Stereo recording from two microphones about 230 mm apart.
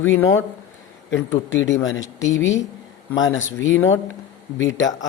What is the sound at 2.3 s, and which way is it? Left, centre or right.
Speech, left.